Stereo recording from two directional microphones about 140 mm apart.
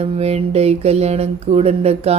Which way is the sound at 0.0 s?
45° right (ahead or behind).